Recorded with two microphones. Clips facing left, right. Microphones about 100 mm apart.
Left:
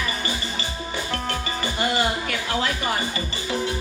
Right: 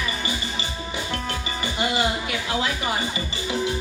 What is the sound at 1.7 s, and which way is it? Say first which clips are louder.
Music: even; 15° right (ahead or behind).